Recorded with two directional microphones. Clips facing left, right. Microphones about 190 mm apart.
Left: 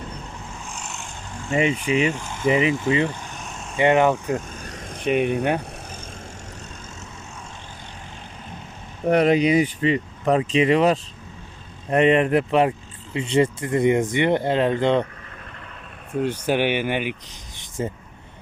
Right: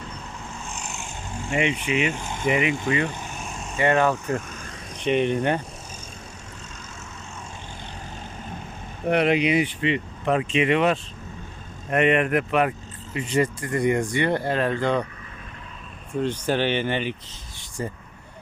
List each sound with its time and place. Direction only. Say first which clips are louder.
1.5 s speech: left 3 dB; 35° left (ahead or behind)
3.5 s vehicle: right 1 dB; centre (ahead or behind)
3.8 s speech: left 3 dB; 20° left (ahead or behind)
4.4 s vehicle: left 2 dB; 35° left (ahead or behind)
5.0 s speech: left 1 dB; 5° left (ahead or behind)
9.0 s speech: left 3 dB; 40° left (ahead or behind); by 15.0 s 20° left (ahead or behind)
16.2 s speech: left 2 dB; 10° left (ahead or behind)